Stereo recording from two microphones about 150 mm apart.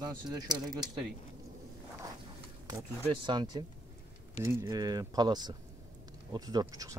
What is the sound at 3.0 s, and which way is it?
Speech, 30° right (ahead or behind).